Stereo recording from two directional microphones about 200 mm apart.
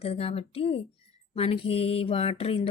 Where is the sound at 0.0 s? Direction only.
30° left (ahead or behind).